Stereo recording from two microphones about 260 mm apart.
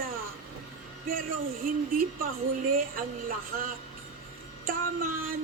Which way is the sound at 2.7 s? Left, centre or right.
Right.